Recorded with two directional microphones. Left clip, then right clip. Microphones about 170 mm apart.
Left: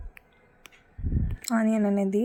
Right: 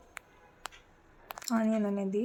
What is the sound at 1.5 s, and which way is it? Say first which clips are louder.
Speech: left 5 dB; 25° left (ahead or behind).